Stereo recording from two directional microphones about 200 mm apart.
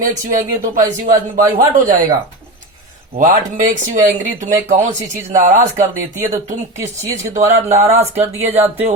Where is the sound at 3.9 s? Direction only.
40° right (ahead or behind).